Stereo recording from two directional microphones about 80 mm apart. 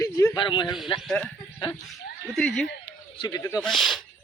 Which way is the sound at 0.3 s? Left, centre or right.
Left.